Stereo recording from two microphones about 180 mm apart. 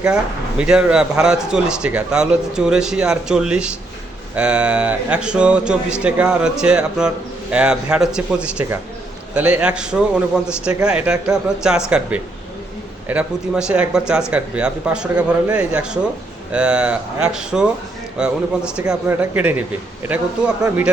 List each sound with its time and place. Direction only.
0.6 s a man's voice: 5° right (ahead or behind)